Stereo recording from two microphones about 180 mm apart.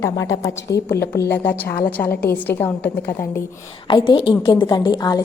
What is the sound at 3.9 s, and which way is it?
A woman's voice, 25° left (ahead or behind).